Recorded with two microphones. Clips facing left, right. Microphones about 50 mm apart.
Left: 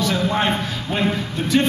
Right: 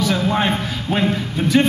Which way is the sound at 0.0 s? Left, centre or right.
Centre.